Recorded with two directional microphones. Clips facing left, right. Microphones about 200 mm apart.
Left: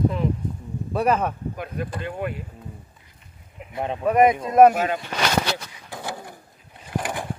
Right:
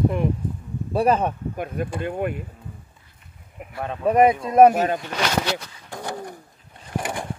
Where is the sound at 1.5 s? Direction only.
50° right (ahead or behind).